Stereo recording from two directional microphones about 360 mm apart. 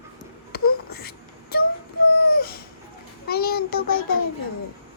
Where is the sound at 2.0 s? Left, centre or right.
Left.